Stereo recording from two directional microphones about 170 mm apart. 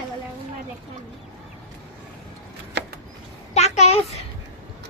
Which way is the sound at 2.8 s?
90° right.